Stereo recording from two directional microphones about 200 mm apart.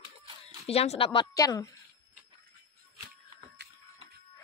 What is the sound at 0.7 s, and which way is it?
Speech, 30° left (ahead or behind).